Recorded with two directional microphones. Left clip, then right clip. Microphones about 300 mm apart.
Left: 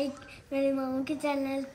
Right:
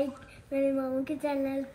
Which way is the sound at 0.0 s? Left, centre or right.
Centre.